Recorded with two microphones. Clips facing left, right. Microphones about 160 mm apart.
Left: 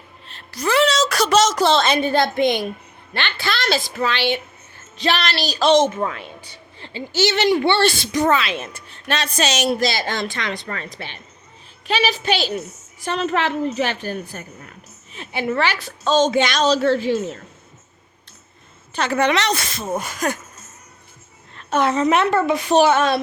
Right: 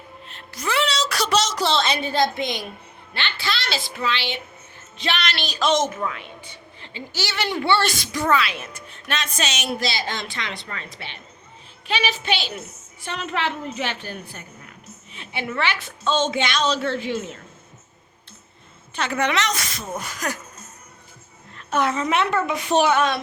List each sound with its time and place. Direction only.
0.3 s a woman's voice: 35° left (ahead or behind)
4.9 s a woman's voice: 35° left (ahead or behind)
7.2 s a woman's voice: 20° left (ahead or behind)
18.9 s a woman's voice: 35° left (ahead or behind)
21.7 s speech: 30° left (ahead or behind)
22.1 s a woman's voice: 40° left (ahead or behind)